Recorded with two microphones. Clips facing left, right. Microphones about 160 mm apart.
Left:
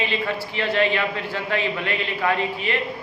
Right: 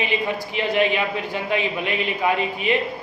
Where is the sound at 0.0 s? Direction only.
15° right (ahead or behind).